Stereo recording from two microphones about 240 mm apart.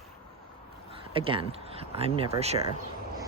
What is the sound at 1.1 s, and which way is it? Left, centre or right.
Speech, right.